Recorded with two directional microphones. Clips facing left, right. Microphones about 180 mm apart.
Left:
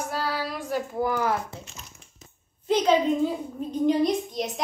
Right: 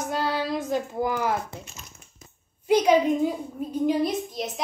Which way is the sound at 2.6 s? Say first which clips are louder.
Right 2 dB; 10° right (ahead or behind).